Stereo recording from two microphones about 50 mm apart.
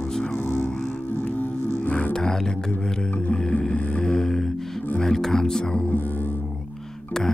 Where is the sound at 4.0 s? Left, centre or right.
Centre.